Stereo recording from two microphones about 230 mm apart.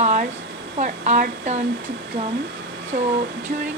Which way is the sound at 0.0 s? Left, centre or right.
Right.